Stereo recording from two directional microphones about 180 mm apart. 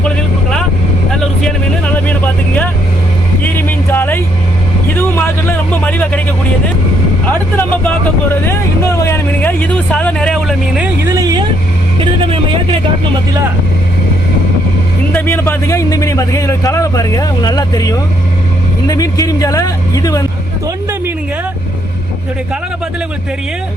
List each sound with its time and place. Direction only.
1.9 s vehicle: 10° left (ahead or behind)
3.4 s music: 10° left (ahead or behind)
4.9 s a sound: 10° left (ahead or behind)
7.3 s vehicle: 10° left (ahead or behind)
11.1 s vehicle: 20° right (ahead or behind)
15.1 s a man's voice: 10° left (ahead or behind)